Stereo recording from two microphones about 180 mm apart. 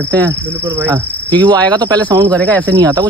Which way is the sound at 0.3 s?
10° right (ahead or behind).